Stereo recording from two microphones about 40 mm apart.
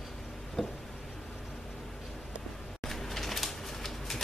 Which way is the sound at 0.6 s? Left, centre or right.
Centre.